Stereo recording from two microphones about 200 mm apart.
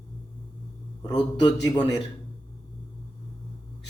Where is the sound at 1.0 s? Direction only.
20° left (ahead or behind).